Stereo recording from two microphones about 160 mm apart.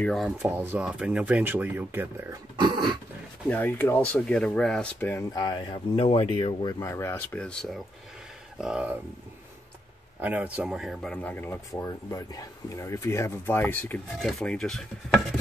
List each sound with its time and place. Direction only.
0.0 s speech: centre (ahead or behind)
0.5 s speech: 10° right (ahead or behind)
2.6 s dog: 25° right (ahead or behind)
3.4 s speech: 10° left (ahead or behind)
5.1 s speech: 25° left (ahead or behind)
6.8 s speech: 15° left (ahead or behind)
8.5 s speech: 5° right (ahead or behind)
10.2 s speech: 10° right (ahead or behind)